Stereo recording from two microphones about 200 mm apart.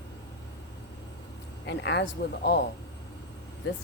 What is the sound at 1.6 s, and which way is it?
Speech, 60° left (ahead or behind).